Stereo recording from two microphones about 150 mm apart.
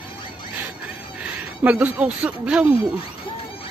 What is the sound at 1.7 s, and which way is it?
Speech, 10° right (ahead or behind).